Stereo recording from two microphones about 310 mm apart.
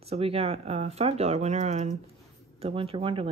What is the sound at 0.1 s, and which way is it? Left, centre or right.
Speech, centre.